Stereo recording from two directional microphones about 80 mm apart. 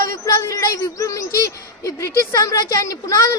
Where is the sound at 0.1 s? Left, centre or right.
Left.